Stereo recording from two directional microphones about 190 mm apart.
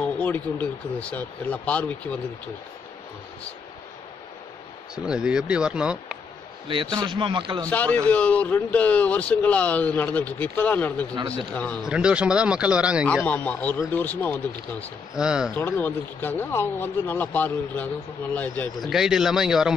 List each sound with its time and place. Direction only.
0.2 s speech: 10° left (ahead or behind)
4.9 s speech: 5° right (ahead or behind)
6.7 s speech: 20° right (ahead or behind)
7.6 s speech: 10° left (ahead or behind)
11.8 s speech: 5° right (ahead or behind)
13.2 s speech: 10° left (ahead or behind)
15.1 s speech: 5° right (ahead or behind)
15.5 s speech: 10° left (ahead or behind)
18.9 s speech: centre (ahead or behind)